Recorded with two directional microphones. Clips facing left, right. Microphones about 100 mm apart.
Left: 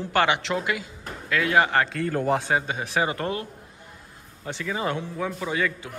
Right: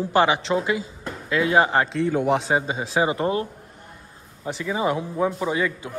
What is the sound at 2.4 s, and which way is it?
A man's voice, 25° right (ahead or behind).